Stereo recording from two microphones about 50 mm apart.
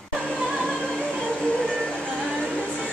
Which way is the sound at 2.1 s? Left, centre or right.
Centre.